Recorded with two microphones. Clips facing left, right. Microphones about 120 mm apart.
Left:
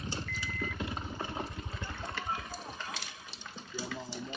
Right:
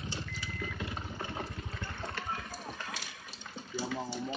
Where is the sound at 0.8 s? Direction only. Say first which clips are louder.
Left 2 dB; 25° left (ahead or behind).